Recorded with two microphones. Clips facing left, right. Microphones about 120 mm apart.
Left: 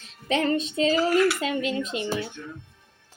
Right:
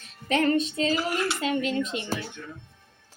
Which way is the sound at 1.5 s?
35° right (ahead or behind).